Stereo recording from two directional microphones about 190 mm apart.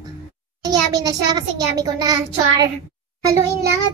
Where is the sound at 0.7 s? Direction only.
20° right (ahead or behind).